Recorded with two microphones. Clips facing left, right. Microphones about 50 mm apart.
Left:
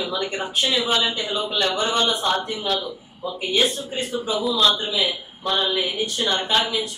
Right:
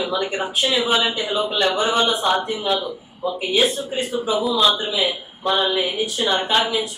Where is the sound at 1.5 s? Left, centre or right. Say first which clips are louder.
Right 2 dB; centre.